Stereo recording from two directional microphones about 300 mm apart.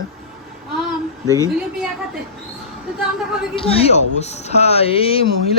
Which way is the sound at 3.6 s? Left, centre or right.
Centre.